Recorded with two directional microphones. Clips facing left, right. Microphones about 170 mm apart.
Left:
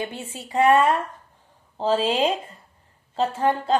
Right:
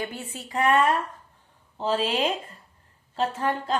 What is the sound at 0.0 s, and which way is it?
A woman's voice, 25° left (ahead or behind).